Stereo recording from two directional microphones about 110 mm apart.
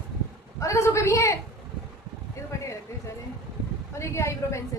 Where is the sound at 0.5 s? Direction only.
25° left (ahead or behind).